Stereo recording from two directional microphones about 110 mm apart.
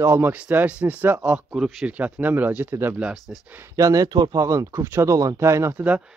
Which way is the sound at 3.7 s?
30° right (ahead or behind).